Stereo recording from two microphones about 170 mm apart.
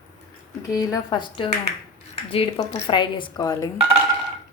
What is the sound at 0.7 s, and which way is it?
Speech, 20° left (ahead or behind).